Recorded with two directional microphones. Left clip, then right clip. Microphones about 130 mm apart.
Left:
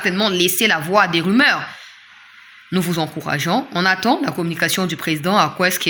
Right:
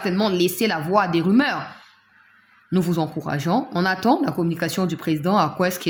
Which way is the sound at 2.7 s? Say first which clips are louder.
Left 2 dB; 10° right (ahead or behind).